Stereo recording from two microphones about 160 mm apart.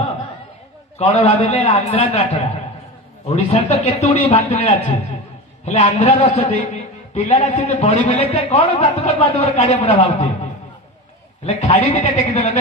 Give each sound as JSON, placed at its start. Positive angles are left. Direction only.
{"t": 0.9, "sound": "a man's voice", "side_deg": 40}
{"t": 3.2, "sound": "a man's voice", "side_deg": 40}
{"t": 11.4, "sound": "a man's voice", "side_deg": 40}